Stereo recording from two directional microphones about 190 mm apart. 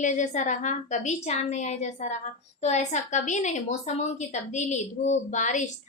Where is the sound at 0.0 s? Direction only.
40° left (ahead or behind).